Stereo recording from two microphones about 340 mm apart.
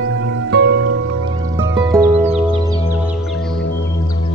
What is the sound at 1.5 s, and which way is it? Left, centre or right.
Music, centre.